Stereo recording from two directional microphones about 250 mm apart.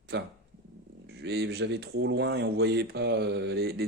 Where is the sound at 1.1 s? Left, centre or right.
Right.